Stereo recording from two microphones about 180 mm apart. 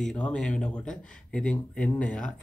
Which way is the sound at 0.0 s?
5° left (ahead or behind).